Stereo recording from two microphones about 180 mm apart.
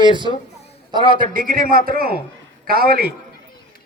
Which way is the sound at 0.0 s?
25° right (ahead or behind).